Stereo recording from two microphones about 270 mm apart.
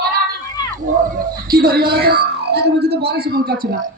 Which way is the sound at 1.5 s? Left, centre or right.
Right.